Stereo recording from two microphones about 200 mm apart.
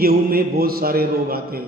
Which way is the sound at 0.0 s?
50° right (ahead or behind).